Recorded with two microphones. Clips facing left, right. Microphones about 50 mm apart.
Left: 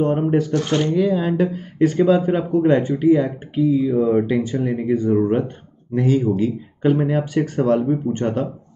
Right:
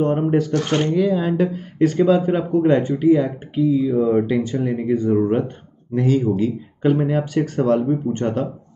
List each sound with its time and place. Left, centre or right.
0.0 s speech: centre
0.5 s speech: right
0.9 s speech: centre